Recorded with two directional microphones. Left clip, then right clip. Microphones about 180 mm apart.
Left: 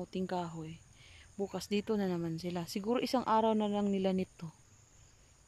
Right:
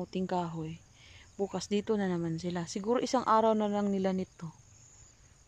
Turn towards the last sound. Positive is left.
turn(degrees=5)  # may be behind; listen again after turning